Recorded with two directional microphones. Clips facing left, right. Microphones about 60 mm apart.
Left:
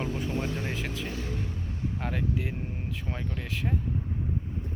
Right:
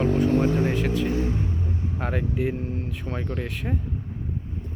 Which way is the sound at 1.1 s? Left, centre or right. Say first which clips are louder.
Right 9 dB; right.